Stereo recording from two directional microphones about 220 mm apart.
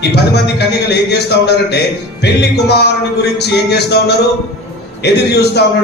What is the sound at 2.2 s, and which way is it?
A man's voice, 50° left (ahead or behind).